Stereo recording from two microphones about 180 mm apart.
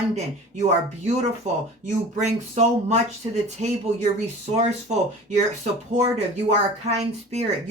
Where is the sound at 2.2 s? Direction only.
40° right (ahead or behind).